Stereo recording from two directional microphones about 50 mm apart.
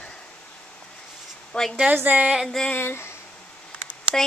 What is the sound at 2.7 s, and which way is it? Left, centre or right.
Speech, left.